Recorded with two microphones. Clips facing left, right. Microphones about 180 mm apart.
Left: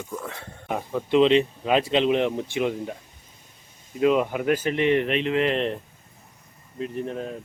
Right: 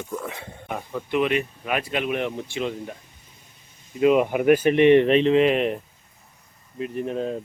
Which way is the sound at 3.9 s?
5° right (ahead or behind).